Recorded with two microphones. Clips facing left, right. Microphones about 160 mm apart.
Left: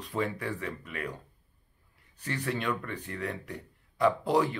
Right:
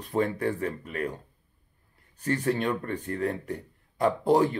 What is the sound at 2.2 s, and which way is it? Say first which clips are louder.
Speech: right 7 dB; 40° right (ahead or behind).